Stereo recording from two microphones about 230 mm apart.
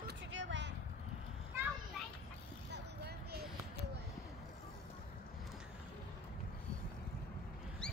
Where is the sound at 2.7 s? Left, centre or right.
Right.